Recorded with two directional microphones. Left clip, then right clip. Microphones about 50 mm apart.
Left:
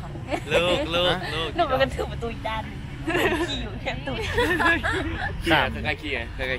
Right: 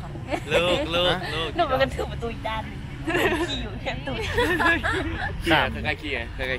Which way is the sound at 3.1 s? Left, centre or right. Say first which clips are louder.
Even; right.